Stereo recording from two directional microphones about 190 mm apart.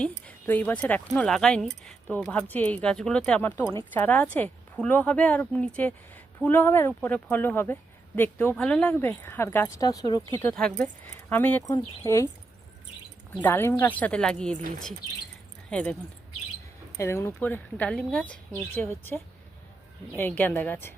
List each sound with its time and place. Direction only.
0.3 s speech: 10° left (ahead or behind)
10.3 s speech: 5° left (ahead or behind)
13.4 s speech: 10° left (ahead or behind)
15.7 s speech: 5° left (ahead or behind)
17.0 s speech: 15° left (ahead or behind)